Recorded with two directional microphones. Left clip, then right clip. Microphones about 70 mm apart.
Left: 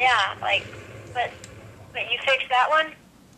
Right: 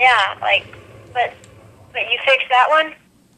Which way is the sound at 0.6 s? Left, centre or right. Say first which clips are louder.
Even; centre.